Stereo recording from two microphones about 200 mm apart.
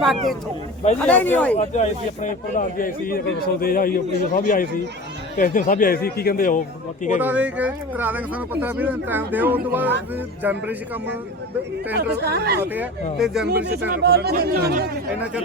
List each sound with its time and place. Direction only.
0.0 s speech: centre (ahead or behind)
1.5 s speech: 35° left (ahead or behind)
7.2 s speech: 5° right (ahead or behind)
12.1 s speech: 55° right (ahead or behind)
12.7 s speech: 5° right (ahead or behind)
13.5 s speech: 55° right (ahead or behind)